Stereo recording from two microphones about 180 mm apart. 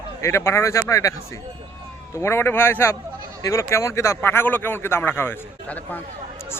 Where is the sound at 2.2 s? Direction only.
15° left (ahead or behind).